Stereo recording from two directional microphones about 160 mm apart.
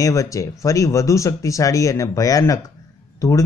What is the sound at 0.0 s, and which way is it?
Speech, 20° left (ahead or behind).